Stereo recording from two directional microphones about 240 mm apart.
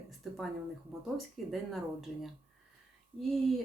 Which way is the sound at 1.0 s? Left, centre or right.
Centre.